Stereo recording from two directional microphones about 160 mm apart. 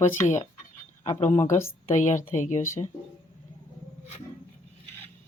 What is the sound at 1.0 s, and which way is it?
Speech, 45° left (ahead or behind).